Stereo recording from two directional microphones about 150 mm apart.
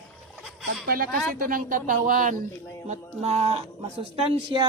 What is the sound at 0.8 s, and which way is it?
A woman's voice, 75° right (ahead or behind).